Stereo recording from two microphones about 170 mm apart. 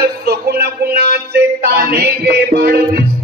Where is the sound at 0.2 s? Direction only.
70° right (ahead or behind).